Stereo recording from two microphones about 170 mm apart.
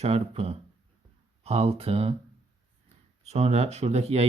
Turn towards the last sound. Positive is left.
turn(degrees=-40)  # may be behind; listen again after turning